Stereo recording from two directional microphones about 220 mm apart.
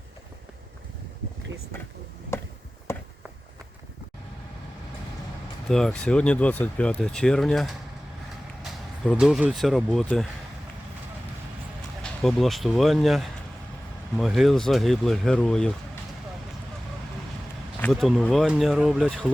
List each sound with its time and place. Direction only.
5.6 s speech: centre (ahead or behind)
9.0 s speech: centre (ahead or behind)
12.2 s speech: centre (ahead or behind)
17.7 s speech: 5° left (ahead or behind)